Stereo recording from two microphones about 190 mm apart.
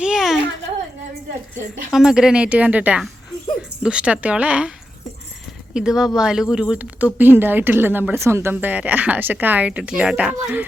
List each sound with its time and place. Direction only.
0.0 s a sound: 5° right (ahead or behind)
1.9 s a woman's voice: 5° right (ahead or behind)
5.7 s a woman's voice: 5° right (ahead or behind)